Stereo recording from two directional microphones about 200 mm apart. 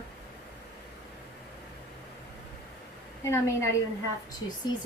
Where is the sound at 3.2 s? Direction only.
15° left (ahead or behind).